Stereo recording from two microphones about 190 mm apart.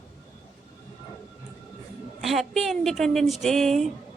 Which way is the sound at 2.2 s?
Centre (ahead or behind).